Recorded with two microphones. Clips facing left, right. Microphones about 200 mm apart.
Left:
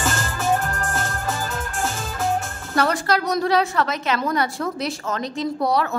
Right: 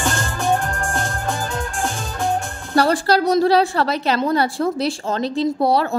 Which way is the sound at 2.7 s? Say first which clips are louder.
Right 4 dB; 35° right (ahead or behind).